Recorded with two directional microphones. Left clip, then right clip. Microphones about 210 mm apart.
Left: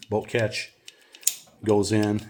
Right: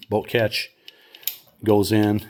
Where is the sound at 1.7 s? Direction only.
40° right (ahead or behind).